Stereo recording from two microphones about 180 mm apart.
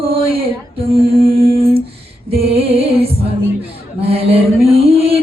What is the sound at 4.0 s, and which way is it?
Mantra, 35° right (ahead or behind).